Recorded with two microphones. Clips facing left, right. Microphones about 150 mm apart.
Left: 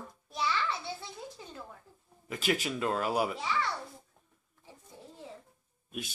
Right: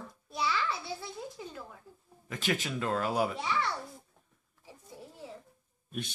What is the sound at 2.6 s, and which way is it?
Speech, 15° left (ahead or behind).